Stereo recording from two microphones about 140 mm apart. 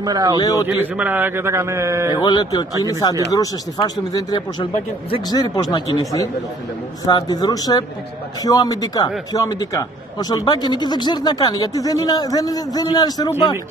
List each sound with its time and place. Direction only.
0.0 s a man's voice: 25° right (ahead or behind)
0.4 s speech: 25° left (ahead or behind)
0.7 s a man's voice: 10° right (ahead or behind)
2.1 s speech: 30° left (ahead or behind)